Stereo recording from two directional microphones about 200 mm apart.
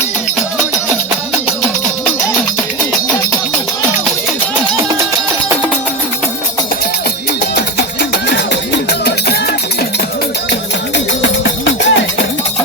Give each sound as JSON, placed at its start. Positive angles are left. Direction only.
{"t": 8.9, "sound": "music", "side_deg": 55}
{"t": 10.5, "sound": "music", "side_deg": 65}